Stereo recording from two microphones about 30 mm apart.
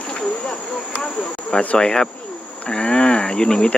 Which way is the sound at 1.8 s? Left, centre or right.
Left.